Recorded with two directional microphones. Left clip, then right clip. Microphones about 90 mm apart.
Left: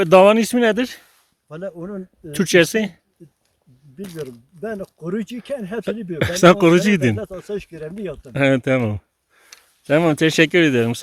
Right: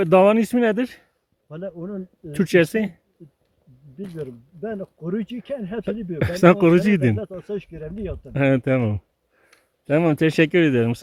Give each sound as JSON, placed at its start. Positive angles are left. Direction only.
{"t": 0.0, "sound": "speech", "side_deg": 25}
{"t": 1.5, "sound": "speech", "side_deg": 10}
{"t": 4.3, "sound": "speech", "side_deg": 0}
{"t": 6.1, "sound": "speech", "side_deg": 25}
{"t": 7.3, "sound": "speech", "side_deg": 10}
{"t": 9.8, "sound": "speech", "side_deg": 20}